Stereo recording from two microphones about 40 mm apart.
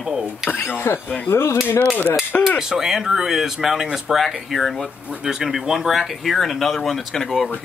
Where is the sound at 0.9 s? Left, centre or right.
Left.